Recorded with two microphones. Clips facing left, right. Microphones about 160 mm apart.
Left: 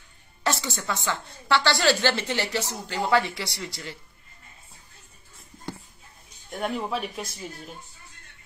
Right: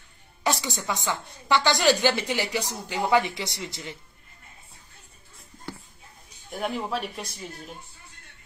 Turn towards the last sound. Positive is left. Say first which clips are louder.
# left 1 dB
turn(degrees=0)  # may be behind; listen again after turning